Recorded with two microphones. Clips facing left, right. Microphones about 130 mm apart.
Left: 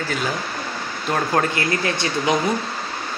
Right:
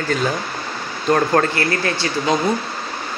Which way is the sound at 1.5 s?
20° left (ahead or behind).